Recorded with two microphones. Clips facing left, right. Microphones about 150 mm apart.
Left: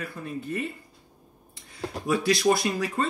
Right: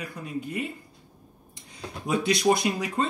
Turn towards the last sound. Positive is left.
turn(degrees=-20)  # may be behind; listen again after turning